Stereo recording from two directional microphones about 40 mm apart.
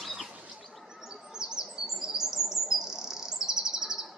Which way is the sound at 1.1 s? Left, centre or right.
Centre.